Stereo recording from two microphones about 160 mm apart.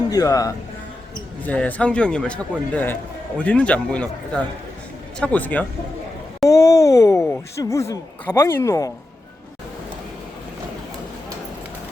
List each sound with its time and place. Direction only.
0.1 s speech: 25° left (ahead or behind)
1.5 s a man's voice: 10° left (ahead or behind)